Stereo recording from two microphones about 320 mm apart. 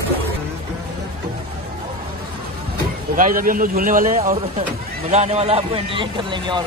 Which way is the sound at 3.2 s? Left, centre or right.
Right.